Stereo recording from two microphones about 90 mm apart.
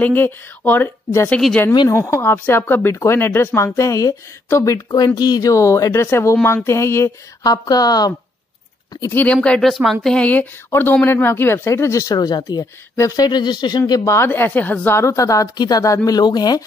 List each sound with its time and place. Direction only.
0.0 s speech: 20° left (ahead or behind)
4.9 s a woman's voice: 50° left (ahead or behind); by 7.1 s 30° left (ahead or behind)
7.4 s speech: 45° left (ahead or behind)
9.1 s speech: 15° left (ahead or behind)
9.7 s speech: centre (ahead or behind)
10.1 s a woman's voice: 15° left (ahead or behind); by 14.0 s 50° left (ahead or behind)
14.0 s a woman's voice: 30° left (ahead or behind); by 16.6 s 50° left (ahead or behind)